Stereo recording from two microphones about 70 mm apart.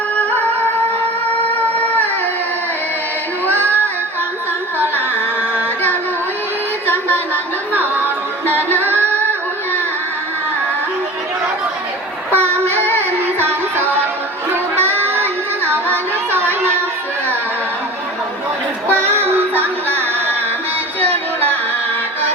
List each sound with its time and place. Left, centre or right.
0.2 s music: left
1.5 s music: left
3.4 s music: right
7.7 s music: right
12.3 s music: right
14.5 s child singing: right
18.9 s music: right